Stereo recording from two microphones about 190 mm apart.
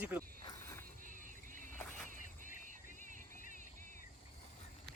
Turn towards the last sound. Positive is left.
turn(degrees=-45)  # may be behind; listen again after turning